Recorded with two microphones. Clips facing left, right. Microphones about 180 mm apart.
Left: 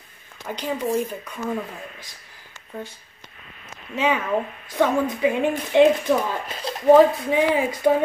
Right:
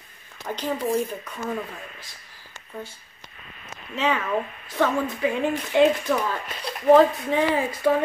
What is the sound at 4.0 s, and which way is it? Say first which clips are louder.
Speech: left 2 dB; 15° left (ahead or behind).